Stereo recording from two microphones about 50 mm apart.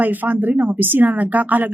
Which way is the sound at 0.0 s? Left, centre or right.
Right.